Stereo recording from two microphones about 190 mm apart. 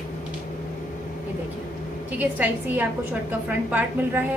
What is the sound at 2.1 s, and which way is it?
Speech, 10° right (ahead or behind).